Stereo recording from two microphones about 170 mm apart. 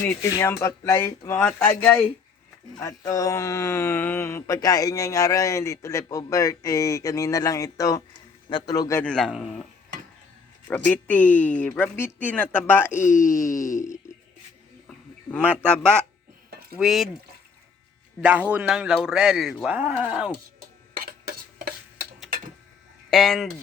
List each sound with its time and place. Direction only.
0.0 s speech: 15° left (ahead or behind)
9.0 s speech: 5° left (ahead or behind)
10.7 s speech: 10° left (ahead or behind)
14.8 s speech: 10° left (ahead or behind)
18.2 s speech: 10° right (ahead or behind)
21.0 s cough: 65° right (ahead or behind)
23.0 s speech: centre (ahead or behind)